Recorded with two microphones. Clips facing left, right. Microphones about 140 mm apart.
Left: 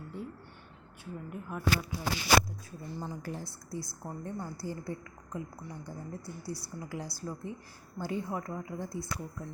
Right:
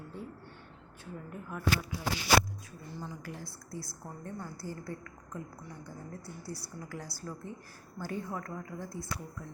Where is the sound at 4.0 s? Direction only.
20° left (ahead or behind).